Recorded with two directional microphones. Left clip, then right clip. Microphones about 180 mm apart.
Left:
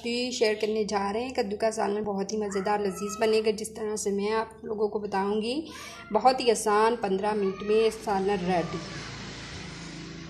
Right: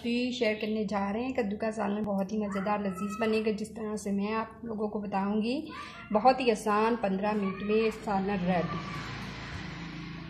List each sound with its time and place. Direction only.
0.1 s a woman's voice: 25° left (ahead or behind)